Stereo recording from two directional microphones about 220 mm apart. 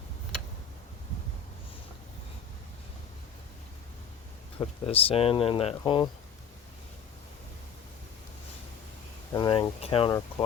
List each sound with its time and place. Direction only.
4.6 s speech: 25° left (ahead or behind)
9.3 s speech: 20° left (ahead or behind)